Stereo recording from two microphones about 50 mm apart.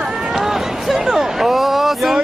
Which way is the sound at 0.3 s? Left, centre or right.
Centre.